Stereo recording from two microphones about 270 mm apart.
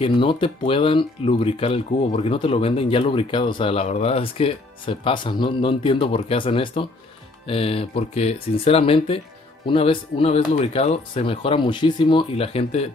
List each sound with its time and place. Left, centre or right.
0.0 s speech: centre